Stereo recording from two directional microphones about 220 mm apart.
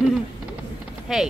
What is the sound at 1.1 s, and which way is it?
Speech, centre (ahead or behind).